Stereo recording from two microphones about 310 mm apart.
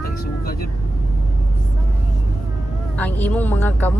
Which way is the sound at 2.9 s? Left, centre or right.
Centre.